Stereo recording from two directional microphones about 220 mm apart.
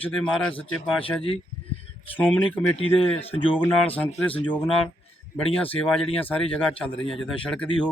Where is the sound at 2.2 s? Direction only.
10° left (ahead or behind).